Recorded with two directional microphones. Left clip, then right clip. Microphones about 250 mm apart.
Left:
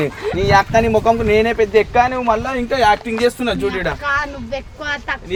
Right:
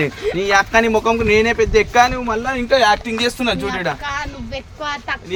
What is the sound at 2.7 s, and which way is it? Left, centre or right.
Speech, centre.